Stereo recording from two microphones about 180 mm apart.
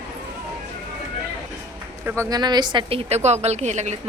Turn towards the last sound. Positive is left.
turn(degrees=-40)  # may be behind; listen again after turning